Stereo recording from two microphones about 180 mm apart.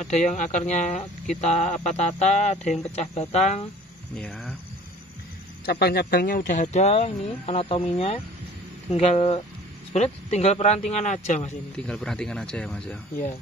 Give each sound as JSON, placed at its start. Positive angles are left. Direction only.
{"t": 0.0, "sound": "speech", "side_deg": 40}
{"t": 4.2, "sound": "speech", "side_deg": 0}
{"t": 5.7, "sound": "speech", "side_deg": 65}
{"t": 11.7, "sound": "speech", "side_deg": 5}